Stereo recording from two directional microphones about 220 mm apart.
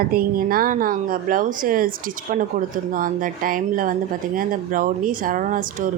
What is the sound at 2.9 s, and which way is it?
Speech, 40° right (ahead or behind).